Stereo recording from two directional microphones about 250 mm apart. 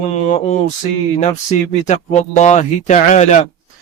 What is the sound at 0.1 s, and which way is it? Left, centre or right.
Speech, left.